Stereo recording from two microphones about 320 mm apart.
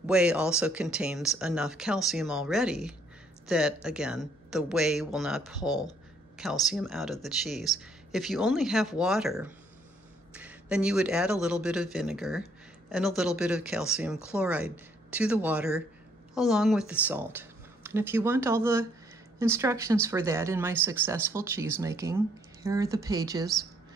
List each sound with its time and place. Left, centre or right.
0.0 s speech: centre